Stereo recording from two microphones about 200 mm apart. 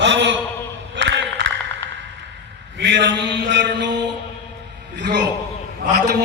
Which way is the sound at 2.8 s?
60° right (ahead or behind).